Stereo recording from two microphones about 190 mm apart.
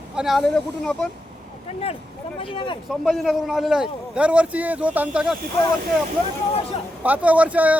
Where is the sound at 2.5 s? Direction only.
25° left (ahead or behind).